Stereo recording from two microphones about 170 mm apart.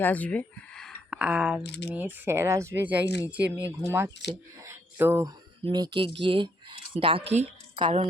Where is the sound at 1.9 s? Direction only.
10° right (ahead or behind).